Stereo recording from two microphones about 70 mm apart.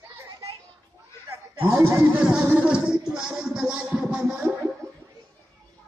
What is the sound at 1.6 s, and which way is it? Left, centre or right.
Speech, right.